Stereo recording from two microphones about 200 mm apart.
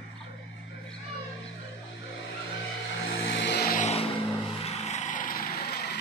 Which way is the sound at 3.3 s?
60° left (ahead or behind).